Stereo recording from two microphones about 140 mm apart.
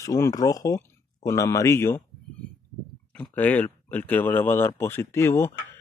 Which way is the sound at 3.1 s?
10° left (ahead or behind).